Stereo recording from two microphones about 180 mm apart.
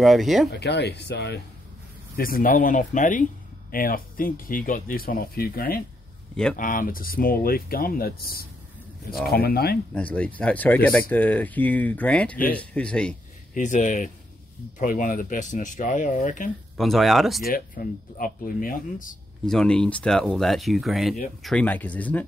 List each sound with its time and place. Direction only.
0.0 s speech: centre (ahead or behind)
0.5 s speech: 70° left (ahead or behind)
2.1 s speech: 55° left (ahead or behind)
9.9 s speech: 5° left (ahead or behind)
13.6 s speech: 45° left (ahead or behind)
16.7 s speech: centre (ahead or behind)
17.4 s speech: 55° left (ahead or behind)
19.4 s speech: 5° left (ahead or behind)